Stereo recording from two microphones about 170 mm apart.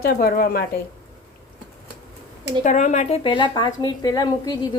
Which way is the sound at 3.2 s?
30° left (ahead or behind).